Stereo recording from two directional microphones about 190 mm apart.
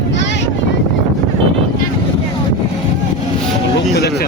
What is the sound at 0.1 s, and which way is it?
Boat, 70° left (ahead or behind).